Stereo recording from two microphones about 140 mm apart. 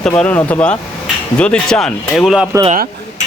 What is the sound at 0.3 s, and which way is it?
Speech, 15° left (ahead or behind).